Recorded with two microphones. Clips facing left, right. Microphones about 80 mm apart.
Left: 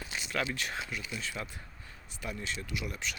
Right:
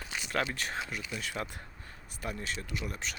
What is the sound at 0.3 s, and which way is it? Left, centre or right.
Speech, right.